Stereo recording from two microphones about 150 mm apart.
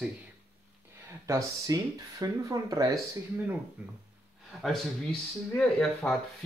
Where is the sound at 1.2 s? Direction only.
25° right (ahead or behind).